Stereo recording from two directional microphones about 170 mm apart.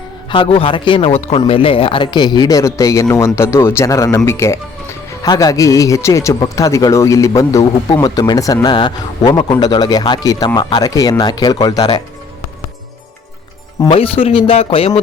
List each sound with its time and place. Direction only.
0.3 s a man's voice: 30° left (ahead or behind)
13.8 s speech: 35° left (ahead or behind)